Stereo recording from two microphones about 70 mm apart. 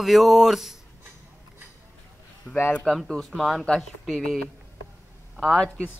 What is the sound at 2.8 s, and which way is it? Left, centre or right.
Speech, centre.